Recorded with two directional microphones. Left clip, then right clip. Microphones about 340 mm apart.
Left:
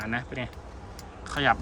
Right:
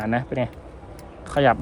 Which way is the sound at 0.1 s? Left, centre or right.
Centre.